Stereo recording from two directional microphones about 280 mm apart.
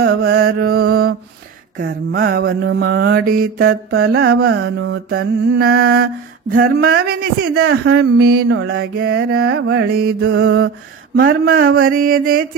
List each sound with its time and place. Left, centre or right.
0.0 s mantra: right